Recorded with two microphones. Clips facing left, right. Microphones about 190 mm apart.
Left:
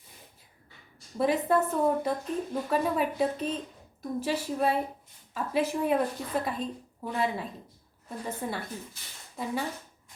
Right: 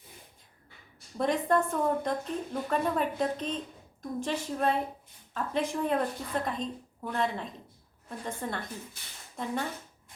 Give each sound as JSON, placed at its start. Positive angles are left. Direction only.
{"t": 1.2, "sound": "speech", "side_deg": 5}